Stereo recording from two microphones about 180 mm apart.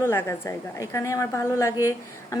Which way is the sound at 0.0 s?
15° left (ahead or behind).